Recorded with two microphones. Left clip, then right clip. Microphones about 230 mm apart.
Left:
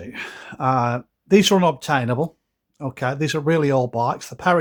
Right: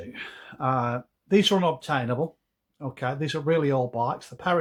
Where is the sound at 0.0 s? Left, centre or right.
Left.